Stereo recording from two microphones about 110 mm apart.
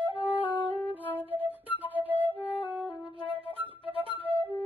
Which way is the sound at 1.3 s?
15° right (ahead or behind).